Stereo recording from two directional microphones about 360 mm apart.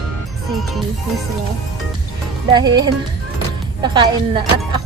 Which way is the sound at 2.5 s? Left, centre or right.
Centre.